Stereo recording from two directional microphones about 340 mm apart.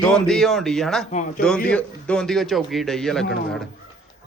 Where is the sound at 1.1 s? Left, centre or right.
Left.